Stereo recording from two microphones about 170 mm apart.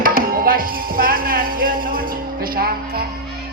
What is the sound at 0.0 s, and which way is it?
Music, 60° right (ahead or behind).